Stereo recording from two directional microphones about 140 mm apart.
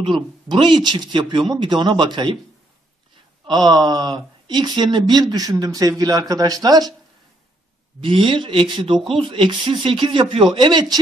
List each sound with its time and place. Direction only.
0.0 s speech: 35° right (ahead or behind)
3.4 s speech: 30° right (ahead or behind)
8.0 s speech: 35° right (ahead or behind)